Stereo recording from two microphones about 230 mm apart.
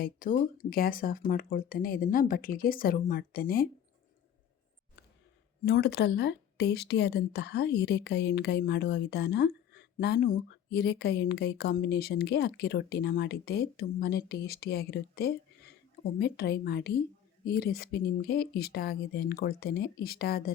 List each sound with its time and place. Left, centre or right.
0.0 s speech: left
5.6 s speech: left